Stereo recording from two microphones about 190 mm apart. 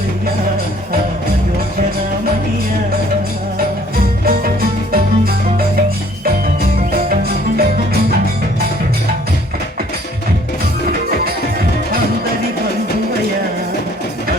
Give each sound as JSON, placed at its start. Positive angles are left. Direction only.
{"t": 4.3, "sound": "music", "side_deg": -50}
{"t": 6.9, "sound": "music", "side_deg": -50}